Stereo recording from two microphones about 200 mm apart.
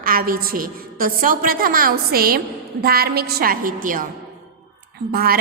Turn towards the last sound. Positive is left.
turn(degrees=-50)  # may be behind; listen again after turning